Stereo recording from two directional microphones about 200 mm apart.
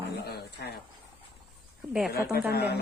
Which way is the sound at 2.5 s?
55° left (ahead or behind).